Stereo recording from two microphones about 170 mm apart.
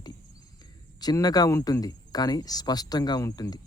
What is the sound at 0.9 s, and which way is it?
Speech, 25° left (ahead or behind).